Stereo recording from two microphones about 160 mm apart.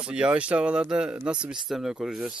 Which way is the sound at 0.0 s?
5° right (ahead or behind).